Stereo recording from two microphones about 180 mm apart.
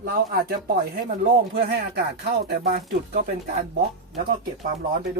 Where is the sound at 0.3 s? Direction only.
55° right (ahead or behind).